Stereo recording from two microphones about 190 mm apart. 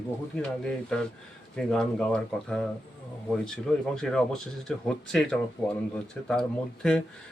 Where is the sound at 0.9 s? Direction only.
5° left (ahead or behind).